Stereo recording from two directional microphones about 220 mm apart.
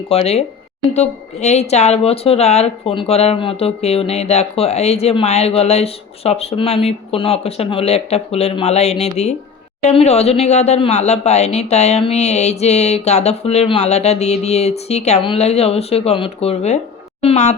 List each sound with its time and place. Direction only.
0.1 s speech: 30° left (ahead or behind)